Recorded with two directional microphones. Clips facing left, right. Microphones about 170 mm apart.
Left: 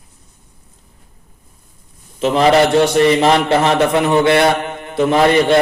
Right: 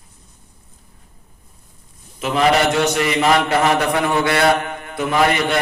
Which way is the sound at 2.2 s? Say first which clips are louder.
Left 5 dB; 30° left (ahead or behind).